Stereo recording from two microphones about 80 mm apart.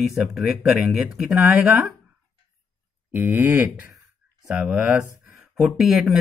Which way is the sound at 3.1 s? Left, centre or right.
Right.